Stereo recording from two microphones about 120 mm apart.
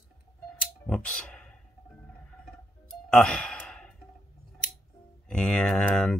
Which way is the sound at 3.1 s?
10° left (ahead or behind).